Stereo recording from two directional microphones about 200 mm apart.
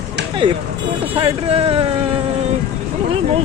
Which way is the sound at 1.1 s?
30° right (ahead or behind).